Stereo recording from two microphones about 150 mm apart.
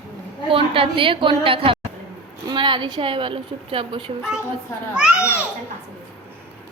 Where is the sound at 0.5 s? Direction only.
35° right (ahead or behind).